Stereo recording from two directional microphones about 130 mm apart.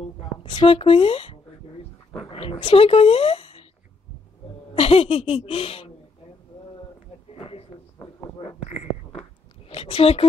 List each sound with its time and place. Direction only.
0.4 s speech: 40° left (ahead or behind)
2.1 s dog: 45° left (ahead or behind)
2.6 s speech: 50° left (ahead or behind)
4.7 s speech: 50° left (ahead or behind)
7.3 s a sound: 45° left (ahead or behind)
8.6 s a sound: 60° left (ahead or behind)
9.7 s speech: 50° left (ahead or behind)